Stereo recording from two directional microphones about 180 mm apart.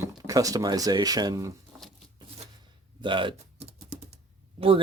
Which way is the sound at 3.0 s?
25° right (ahead or behind).